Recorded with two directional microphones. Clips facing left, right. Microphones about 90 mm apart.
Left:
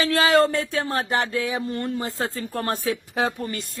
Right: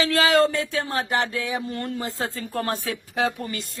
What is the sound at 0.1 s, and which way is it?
Speech, 40° left (ahead or behind).